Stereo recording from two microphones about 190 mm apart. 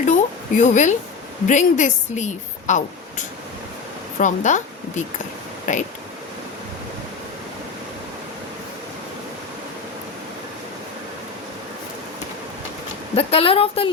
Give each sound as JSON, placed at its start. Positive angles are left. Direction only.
{"t": 0.0, "sound": "a sound", "side_deg": 40}
{"t": 1.5, "sound": "a woman's voice", "side_deg": 40}
{"t": 13.1, "sound": "speech", "side_deg": 30}